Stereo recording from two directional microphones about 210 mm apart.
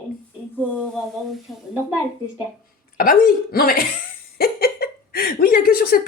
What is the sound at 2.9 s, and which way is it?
Speech, 45° left (ahead or behind).